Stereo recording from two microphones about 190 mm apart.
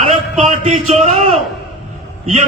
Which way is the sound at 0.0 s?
40° right (ahead or behind).